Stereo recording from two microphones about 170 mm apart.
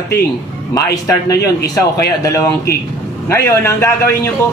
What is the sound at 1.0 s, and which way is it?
A man's voice, 20° left (ahead or behind).